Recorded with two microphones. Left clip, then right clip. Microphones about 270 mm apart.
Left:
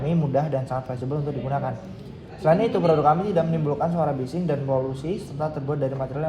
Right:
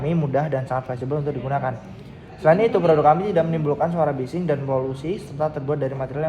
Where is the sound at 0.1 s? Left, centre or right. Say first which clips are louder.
Right 1 dB; right.